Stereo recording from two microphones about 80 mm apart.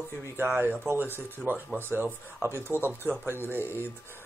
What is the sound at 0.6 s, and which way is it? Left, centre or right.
Speech, right.